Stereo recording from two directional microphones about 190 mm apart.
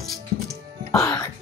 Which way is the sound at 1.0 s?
20° left (ahead or behind).